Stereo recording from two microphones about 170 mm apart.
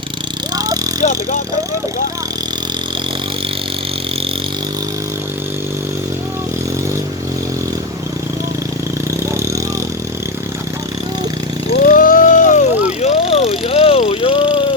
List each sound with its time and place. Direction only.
0.5 s dog: 20° right (ahead or behind)
9.0 s vehicle: 15° right (ahead or behind)
11.7 s vehicle: 55° left (ahead or behind); by 14.7 s 30° left (ahead or behind)